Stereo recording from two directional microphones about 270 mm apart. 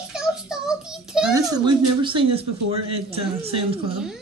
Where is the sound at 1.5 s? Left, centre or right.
Centre.